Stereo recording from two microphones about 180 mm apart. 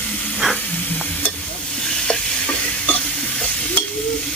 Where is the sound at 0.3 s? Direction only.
5° left (ahead or behind).